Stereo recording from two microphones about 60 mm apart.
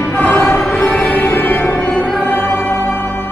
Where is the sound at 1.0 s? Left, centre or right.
Centre.